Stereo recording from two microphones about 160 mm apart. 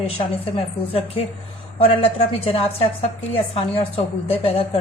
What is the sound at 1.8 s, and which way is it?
A woman's voice, 40° left (ahead or behind).